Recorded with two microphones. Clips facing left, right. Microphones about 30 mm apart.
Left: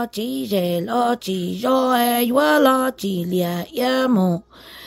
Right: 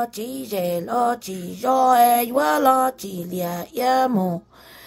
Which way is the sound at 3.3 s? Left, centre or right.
Left.